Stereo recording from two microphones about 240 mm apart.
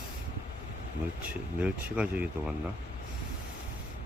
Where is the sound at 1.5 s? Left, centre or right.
Centre.